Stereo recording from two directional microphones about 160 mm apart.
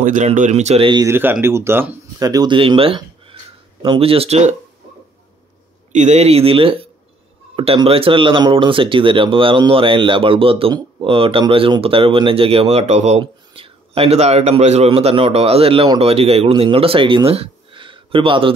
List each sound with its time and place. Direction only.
0.0 s speech: 45° right (ahead or behind)
1.0 s speech: 15° right (ahead or behind); by 4.5 s 40° right (ahead or behind)
5.9 s speech: 45° right (ahead or behind)
13.2 s speech: 35° right (ahead or behind)
17.3 s a sound: 35° right (ahead or behind)